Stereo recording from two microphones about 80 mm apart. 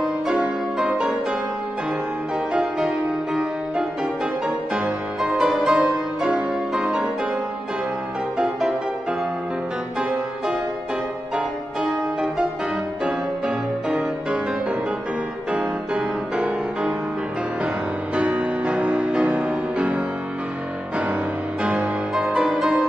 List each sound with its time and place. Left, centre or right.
0.0 s music: centre
2.5 s music: centre
4.7 s music: centre
8.4 s music: centre
11.3 s music: centre
13.8 s music: centre
15.5 s music: centre
18.1 s music: centre
21.6 s music: centre